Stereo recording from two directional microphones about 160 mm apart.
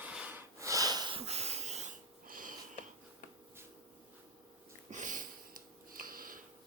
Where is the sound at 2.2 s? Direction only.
60° right (ahead or behind).